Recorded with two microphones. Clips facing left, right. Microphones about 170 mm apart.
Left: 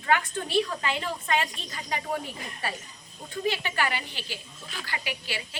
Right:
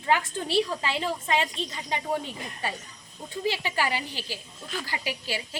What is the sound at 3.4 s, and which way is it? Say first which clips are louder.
A woman's voice: right 1 dB; 30° right (ahead or behind).